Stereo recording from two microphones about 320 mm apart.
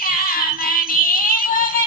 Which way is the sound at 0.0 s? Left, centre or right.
Left.